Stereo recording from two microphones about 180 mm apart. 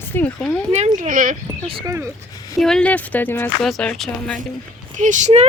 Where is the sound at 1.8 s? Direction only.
15° right (ahead or behind).